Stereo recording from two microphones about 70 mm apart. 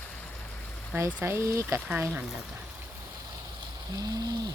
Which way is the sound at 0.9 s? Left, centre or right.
Right.